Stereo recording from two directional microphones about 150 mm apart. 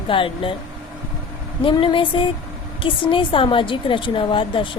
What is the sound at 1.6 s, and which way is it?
A woman's voice, 35° left (ahead or behind).